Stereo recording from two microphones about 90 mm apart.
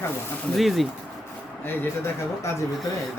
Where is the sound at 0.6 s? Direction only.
Centre (ahead or behind).